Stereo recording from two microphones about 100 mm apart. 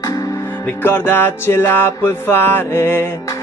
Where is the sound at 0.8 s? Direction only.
20° left (ahead or behind).